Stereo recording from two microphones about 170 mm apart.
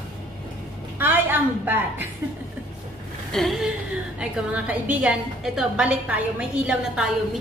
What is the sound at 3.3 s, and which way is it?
A woman's voice, centre (ahead or behind).